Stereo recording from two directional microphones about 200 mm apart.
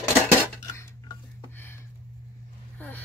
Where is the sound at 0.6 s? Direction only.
15° left (ahead or behind).